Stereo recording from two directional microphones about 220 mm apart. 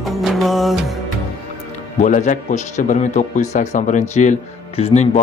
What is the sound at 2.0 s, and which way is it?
A man's voice, 35° left (ahead or behind).